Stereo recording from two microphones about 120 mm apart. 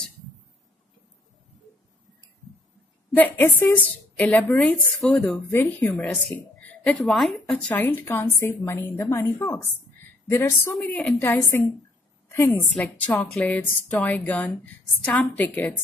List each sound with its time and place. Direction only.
3.2 s a woman's voice: 15° left (ahead or behind)
4.6 s speech: centre (ahead or behind)
5.5 s a woman's voice: 20° left (ahead or behind)
10.9 s a woman's voice: 10° left (ahead or behind)
12.5 s a woman's voice: 10° left (ahead or behind)